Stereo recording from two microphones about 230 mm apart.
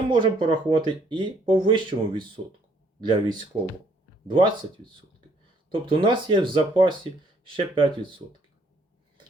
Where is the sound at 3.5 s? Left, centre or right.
Right.